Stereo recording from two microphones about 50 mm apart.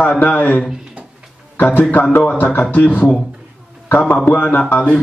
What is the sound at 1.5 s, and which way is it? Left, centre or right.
Speech, left.